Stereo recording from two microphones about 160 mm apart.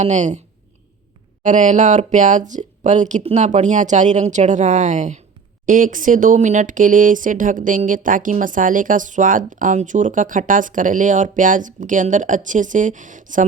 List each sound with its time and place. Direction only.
0.0 s speech: 50° right (ahead or behind)
1.5 s speech: 50° right (ahead or behind)